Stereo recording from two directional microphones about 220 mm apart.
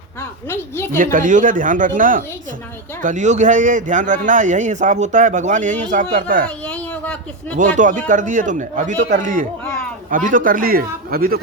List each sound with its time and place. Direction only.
0.2 s a woman's voice: 10° left (ahead or behind)
0.9 s a man's voice: 40° right (ahead or behind)
6.7 s a sound: 5° left (ahead or behind)
7.5 s a man's voice: 35° right (ahead or behind)